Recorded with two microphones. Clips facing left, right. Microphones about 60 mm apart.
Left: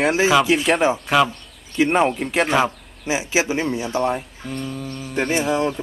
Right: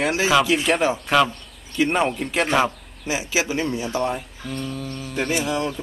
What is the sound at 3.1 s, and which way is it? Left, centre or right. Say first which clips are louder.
Speech: left 3 dB; left.